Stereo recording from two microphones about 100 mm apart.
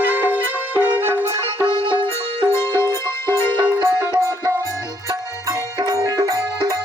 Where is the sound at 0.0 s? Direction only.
20° right (ahead or behind).